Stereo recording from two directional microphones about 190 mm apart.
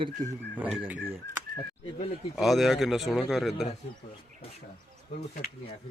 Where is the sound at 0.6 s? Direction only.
10° right (ahead or behind).